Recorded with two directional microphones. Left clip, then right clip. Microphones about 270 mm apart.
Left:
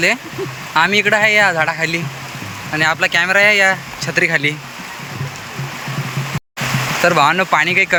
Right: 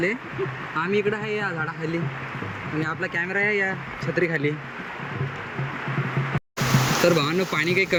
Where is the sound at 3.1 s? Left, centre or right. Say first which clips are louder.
Left 10 dB; left.